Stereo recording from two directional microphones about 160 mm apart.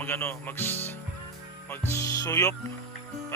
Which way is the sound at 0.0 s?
15° left (ahead or behind).